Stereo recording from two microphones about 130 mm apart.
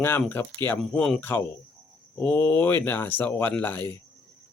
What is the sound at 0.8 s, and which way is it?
Speech, 5° left (ahead or behind).